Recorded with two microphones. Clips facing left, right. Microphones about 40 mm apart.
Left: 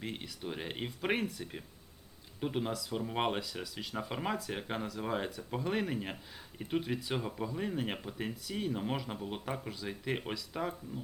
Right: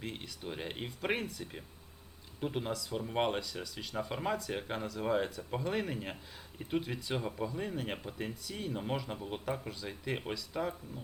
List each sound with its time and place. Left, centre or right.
0.0 s speech: centre